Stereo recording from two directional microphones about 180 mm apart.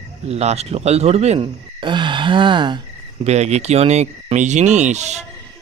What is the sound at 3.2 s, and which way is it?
Speech, 40° right (ahead or behind).